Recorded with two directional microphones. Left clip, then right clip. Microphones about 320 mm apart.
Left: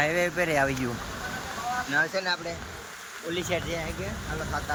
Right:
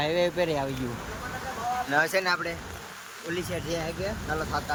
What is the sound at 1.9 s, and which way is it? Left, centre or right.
Speech, right.